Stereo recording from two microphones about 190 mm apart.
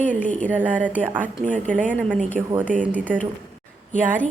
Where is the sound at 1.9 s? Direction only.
5° left (ahead or behind).